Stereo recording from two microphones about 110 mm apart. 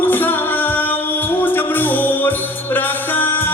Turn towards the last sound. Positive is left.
turn(degrees=20)  # may be behind; listen again after turning